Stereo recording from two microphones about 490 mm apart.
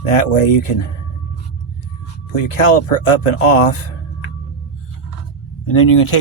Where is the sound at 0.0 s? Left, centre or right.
Left.